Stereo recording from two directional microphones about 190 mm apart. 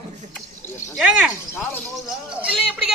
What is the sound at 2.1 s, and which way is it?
Speech, centre (ahead or behind).